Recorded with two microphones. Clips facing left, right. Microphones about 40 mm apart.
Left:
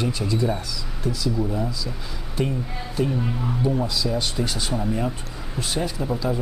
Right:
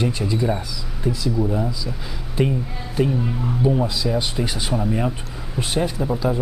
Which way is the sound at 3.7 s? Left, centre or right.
Centre.